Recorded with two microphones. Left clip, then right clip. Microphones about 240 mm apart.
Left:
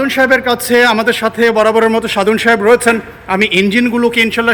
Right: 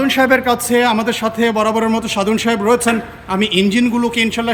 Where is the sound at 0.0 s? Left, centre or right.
Centre.